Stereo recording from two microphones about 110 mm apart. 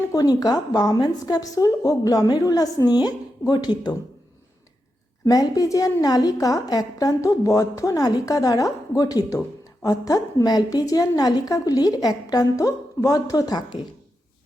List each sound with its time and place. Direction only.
0.1 s a woman's voice: 35° left (ahead or behind)
5.2 s a woman's voice: 30° left (ahead or behind)